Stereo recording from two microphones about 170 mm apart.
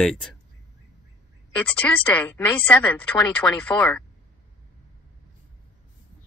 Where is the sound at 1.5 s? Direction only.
10° left (ahead or behind).